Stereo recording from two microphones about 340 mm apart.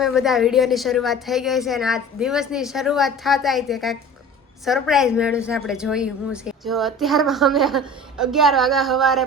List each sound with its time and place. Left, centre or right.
0.0 s a woman's voice: centre